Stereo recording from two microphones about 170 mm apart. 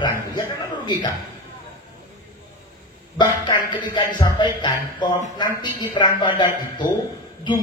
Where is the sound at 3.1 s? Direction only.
25° left (ahead or behind).